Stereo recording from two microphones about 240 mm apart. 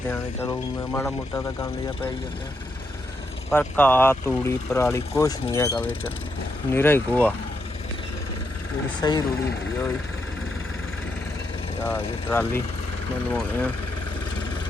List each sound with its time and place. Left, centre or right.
0.1 s speech: centre
3.6 s speech: centre
9.0 s speech: centre
11.8 s speech: centre